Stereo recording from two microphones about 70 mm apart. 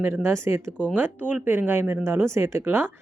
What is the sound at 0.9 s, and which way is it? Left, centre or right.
A woman's voice, right.